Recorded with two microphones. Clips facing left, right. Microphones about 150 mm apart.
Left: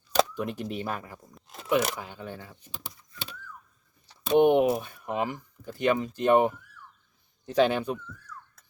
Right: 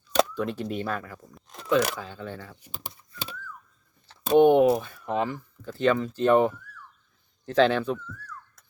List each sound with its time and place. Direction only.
0.3 s speech: 15° left (ahead or behind)
1.4 s speech: centre (ahead or behind)
2.0 s speech: 15° left (ahead or behind)
4.4 s speech: 20° left (ahead or behind)